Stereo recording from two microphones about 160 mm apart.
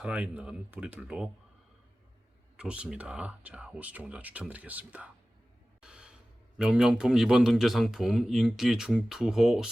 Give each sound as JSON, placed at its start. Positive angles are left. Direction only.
{"t": 0.0, "sound": "speech", "side_deg": -5}
{"t": 2.6, "sound": "speech", "side_deg": -5}
{"t": 5.8, "sound": "a sound", "side_deg": -5}
{"t": 6.6, "sound": "a man's voice", "side_deg": -5}